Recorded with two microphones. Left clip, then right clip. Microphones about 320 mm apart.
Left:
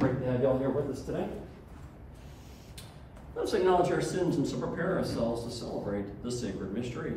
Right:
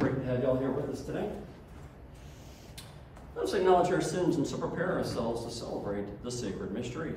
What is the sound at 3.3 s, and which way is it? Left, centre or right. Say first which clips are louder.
Speech: right 1 dB; centre.